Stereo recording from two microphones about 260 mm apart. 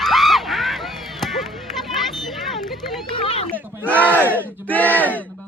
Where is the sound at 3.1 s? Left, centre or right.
Left.